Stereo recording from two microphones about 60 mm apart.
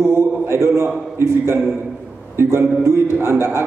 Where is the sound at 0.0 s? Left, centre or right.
Right.